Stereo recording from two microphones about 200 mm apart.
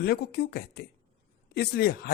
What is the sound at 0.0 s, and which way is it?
A man's voice, 50° left (ahead or behind).